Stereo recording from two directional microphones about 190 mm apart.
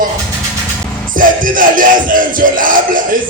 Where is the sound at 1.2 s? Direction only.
45° right (ahead or behind).